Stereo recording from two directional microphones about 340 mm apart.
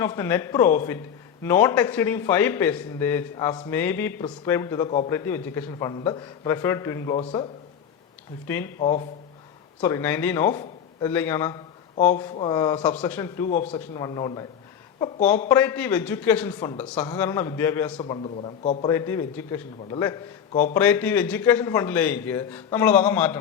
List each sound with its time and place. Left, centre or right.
0.0 s a man's voice: centre
8.4 s a man's voice: centre
13.5 s a man's voice: left
15.4 s a man's voice: centre